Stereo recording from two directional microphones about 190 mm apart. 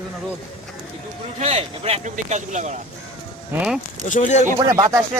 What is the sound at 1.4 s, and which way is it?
Speech, 35° right (ahead or behind).